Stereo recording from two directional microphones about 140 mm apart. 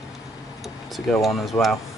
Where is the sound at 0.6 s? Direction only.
Centre (ahead or behind).